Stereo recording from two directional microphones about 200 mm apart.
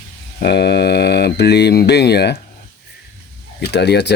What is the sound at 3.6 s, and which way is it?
Speech, 55° left (ahead or behind).